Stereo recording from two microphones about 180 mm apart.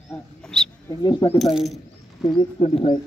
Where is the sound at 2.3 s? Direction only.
30° left (ahead or behind).